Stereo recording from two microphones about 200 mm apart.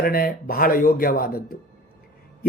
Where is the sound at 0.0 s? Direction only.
50° left (ahead or behind).